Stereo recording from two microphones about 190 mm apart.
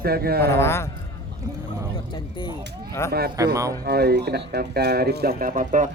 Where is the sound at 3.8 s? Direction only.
60° right (ahead or behind); by 5.9 s 45° right (ahead or behind).